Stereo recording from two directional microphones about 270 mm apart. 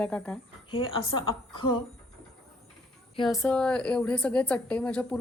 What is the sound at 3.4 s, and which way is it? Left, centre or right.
A woman's voice, centre.